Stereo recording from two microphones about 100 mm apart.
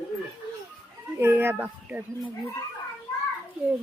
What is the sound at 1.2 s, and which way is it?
Speech, 25° right (ahead or behind).